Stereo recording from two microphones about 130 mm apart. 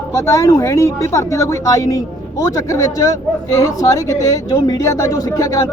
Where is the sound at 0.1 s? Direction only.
25° left (ahead or behind).